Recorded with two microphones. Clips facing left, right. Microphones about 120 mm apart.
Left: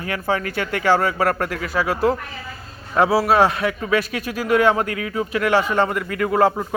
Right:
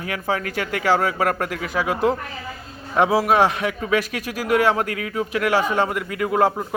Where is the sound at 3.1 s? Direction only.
10° right (ahead or behind).